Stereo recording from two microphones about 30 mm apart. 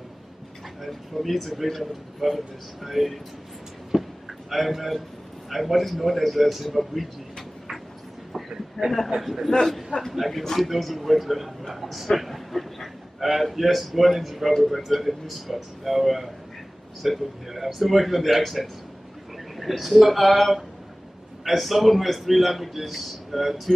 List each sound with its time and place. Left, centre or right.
0.8 s a man's voice: centre
3.9 s a sound: centre
4.5 s a man's voice: centre
8.3 s a sound: centre
9.5 s a man's voice: centre
10.1 s a man's voice: centre
12.1 s a sound: centre
13.2 s a man's voice: centre
19.8 s a man's voice: centre